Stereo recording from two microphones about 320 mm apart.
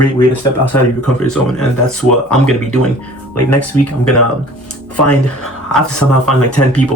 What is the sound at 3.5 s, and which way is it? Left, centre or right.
Speech, left.